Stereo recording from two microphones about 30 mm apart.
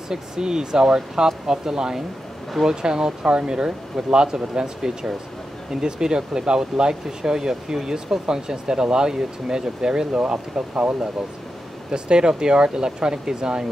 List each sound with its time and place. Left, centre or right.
0.1 s speech: right
11.9 s speech: right